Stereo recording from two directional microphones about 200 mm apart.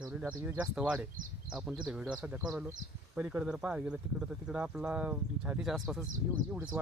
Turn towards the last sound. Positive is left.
turn(degrees=-5)  # may be behind; listen again after turning